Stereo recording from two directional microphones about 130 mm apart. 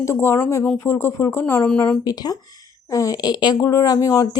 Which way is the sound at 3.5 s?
20° left (ahead or behind).